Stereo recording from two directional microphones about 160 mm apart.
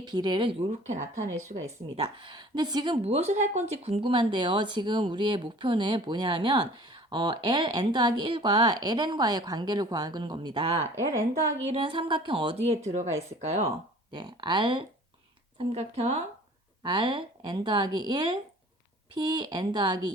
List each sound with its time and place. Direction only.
0.0 s a woman's voice: 25° right (ahead or behind)
0.7 s speech: 50° right (ahead or behind)
1.5 s a woman's voice: 40° right (ahead or behind)
10.9 s a woman's voice: 20° right (ahead or behind)
11.6 s a woman's voice: 35° right (ahead or behind)
14.1 s a woman's voice: 30° right (ahead or behind)
15.5 s a woman's voice: 40° right (ahead or behind)
16.8 s a woman's voice: 30° right (ahead or behind)